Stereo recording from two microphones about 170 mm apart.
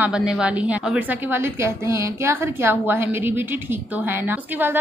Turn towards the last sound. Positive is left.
turn(degrees=-10)  # may be behind; listen again after turning